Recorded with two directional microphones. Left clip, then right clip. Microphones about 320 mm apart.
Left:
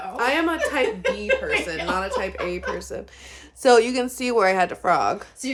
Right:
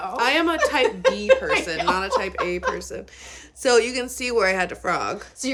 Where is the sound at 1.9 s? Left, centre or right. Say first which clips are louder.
Right 2 dB; centre.